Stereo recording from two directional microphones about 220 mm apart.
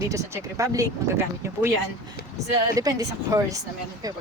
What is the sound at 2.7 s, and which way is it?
A woman's voice, 15° right (ahead or behind).